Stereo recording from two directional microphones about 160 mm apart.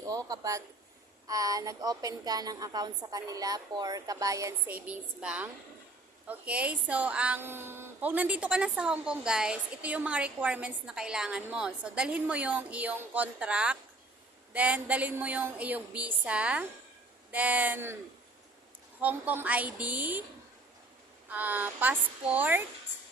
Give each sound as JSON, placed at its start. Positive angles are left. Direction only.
{"t": 0.3, "sound": "a woman's voice", "side_deg": -20}
{"t": 18.9, "sound": "a woman's voice", "side_deg": -10}
{"t": 21.2, "sound": "a woman's voice", "side_deg": -10}